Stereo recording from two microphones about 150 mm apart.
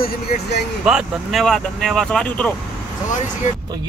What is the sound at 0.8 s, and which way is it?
Speech, 5° right (ahead or behind).